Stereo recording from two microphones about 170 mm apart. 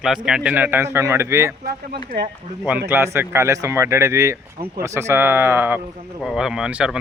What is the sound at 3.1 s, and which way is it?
A man's voice, 15° right (ahead or behind).